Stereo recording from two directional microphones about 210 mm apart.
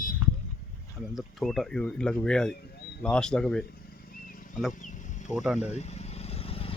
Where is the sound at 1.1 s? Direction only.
Centre (ahead or behind).